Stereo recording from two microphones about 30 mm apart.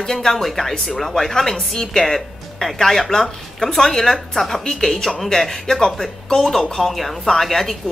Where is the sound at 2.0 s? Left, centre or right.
Centre.